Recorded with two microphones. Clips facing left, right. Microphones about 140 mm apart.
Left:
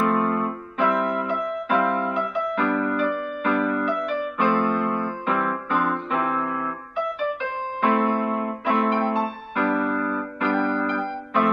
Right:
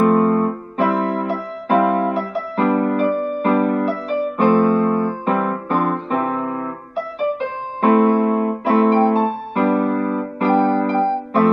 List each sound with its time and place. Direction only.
0.0 s electric piano: 40° right (ahead or behind)
7.2 s music: 35° right (ahead or behind)